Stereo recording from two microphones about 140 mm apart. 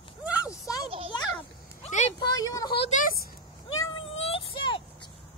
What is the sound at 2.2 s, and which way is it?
Speech, 30° left (ahead or behind).